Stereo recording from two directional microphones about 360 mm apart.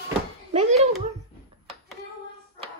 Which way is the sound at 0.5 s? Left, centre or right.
Centre.